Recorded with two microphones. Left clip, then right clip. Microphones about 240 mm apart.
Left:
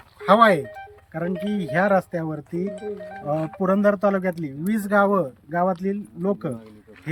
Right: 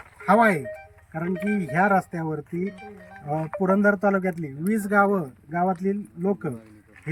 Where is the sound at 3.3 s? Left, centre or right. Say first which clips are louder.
Even; left.